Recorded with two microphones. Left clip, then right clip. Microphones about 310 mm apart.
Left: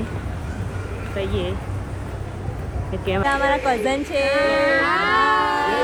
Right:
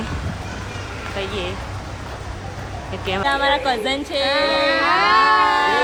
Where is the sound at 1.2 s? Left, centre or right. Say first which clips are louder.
Left 1 dB; centre.